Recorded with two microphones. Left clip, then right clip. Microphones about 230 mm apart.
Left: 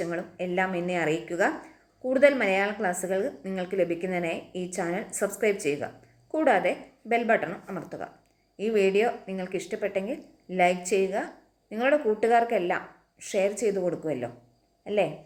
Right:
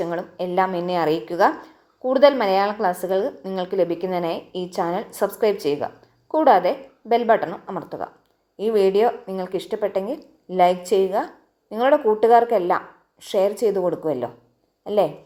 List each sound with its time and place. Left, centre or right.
0.0 s speech: right